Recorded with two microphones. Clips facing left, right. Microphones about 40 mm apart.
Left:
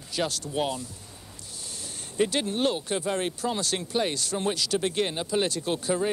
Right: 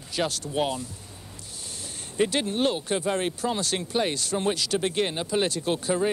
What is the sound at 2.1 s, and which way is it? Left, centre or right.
Speech, right.